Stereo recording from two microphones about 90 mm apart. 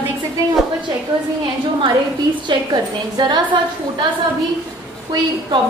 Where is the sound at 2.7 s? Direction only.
50° right (ahead or behind).